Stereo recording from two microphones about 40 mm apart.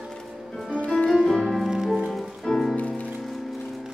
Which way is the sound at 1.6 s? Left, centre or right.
Centre.